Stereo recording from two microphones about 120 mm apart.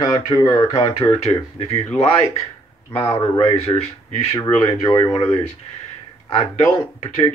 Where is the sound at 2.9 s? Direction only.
55° left (ahead or behind).